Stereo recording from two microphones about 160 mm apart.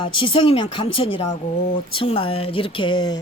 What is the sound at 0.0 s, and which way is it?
Speech, 30° left (ahead or behind).